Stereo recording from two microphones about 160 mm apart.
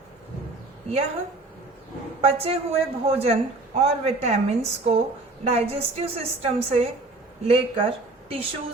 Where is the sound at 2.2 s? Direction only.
35° right (ahead or behind).